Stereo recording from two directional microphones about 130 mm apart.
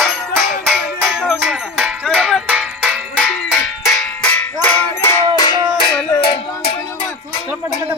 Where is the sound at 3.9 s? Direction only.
10° left (ahead or behind).